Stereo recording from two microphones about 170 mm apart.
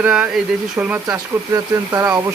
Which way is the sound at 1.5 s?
20° right (ahead or behind).